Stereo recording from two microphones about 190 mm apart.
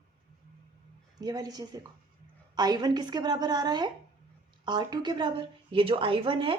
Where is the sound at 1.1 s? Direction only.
20° right (ahead or behind).